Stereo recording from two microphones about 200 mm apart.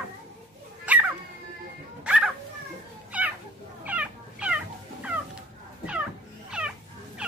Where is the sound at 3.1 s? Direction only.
5° right (ahead or behind).